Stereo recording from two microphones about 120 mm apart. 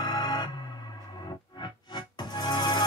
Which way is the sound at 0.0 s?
35° left (ahead or behind).